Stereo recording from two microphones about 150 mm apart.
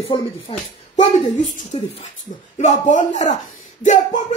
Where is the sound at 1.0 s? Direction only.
50° left (ahead or behind).